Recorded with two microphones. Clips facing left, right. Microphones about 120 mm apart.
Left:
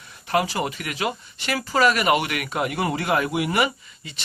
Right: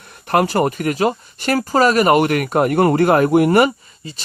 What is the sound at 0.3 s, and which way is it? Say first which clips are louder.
Speech: right 7 dB; 55° right (ahead or behind).